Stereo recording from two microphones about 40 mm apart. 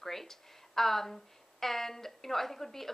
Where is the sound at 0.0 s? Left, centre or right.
Centre.